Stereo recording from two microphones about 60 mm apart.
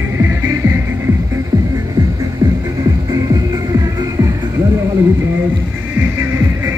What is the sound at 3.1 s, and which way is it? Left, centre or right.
Music, right.